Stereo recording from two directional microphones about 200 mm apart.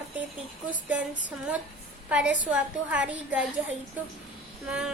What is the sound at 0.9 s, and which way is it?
A woman's voice, 5° right (ahead or behind).